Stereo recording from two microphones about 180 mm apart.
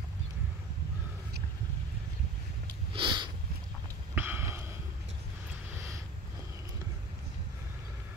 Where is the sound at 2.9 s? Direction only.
25° right (ahead or behind).